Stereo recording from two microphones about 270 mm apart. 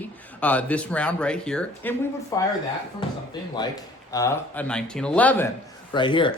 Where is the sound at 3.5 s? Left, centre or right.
Centre.